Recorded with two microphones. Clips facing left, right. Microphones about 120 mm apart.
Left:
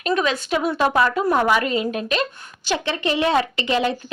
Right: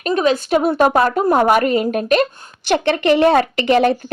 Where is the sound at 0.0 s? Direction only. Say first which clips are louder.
Right 5 dB; 40° right (ahead or behind).